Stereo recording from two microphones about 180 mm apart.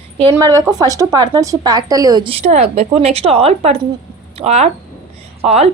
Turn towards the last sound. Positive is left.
turn(degrees=-35)  # may be behind; listen again after turning